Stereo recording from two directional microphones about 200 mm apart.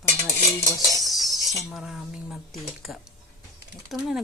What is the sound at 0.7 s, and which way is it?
Cutlery, 20° left (ahead or behind).